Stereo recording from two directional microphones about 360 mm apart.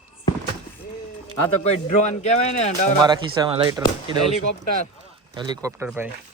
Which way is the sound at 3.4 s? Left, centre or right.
Centre.